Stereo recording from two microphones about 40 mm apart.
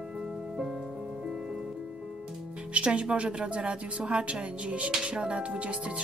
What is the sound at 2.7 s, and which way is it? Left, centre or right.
Speech, right.